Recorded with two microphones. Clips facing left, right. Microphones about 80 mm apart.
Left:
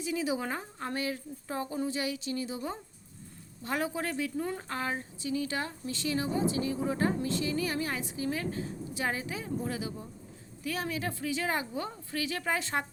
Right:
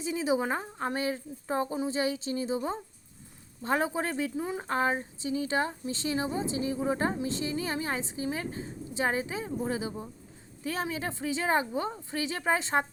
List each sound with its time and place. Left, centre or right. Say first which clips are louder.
0.0 s a woman's voice: right 3 dB; right
4.4 s speech: right 1 dB; centre
4.7 s a woman's voice: right 6 dB; right